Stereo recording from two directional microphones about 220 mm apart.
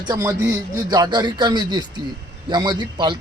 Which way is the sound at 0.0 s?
15° right (ahead or behind).